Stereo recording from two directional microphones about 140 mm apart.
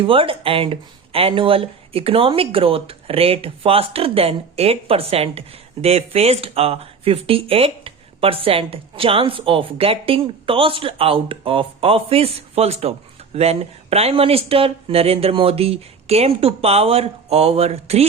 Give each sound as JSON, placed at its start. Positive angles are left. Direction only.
{"t": 0.0, "sound": "speech", "side_deg": -40}